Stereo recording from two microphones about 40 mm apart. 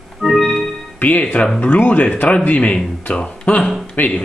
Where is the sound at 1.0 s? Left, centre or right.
Left.